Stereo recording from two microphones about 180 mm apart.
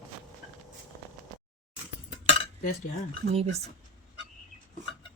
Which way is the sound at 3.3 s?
35° right (ahead or behind).